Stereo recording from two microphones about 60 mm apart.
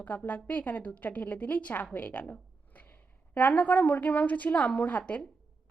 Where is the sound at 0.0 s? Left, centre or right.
Left.